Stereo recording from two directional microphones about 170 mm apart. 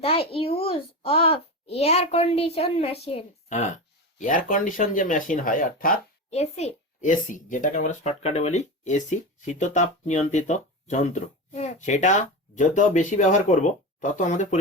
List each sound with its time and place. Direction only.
0.0 s a child's voice: 35° left (ahead or behind)
4.2 s a child's voice: 50° left (ahead or behind)
6.3 s a child's voice: 40° left (ahead or behind)